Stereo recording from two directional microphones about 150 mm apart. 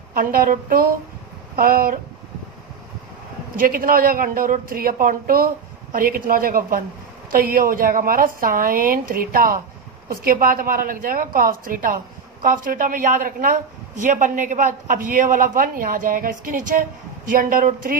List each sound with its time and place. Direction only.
0.1 s speech: 75° right (ahead or behind)
3.5 s a woman's voice: 70° right (ahead or behind)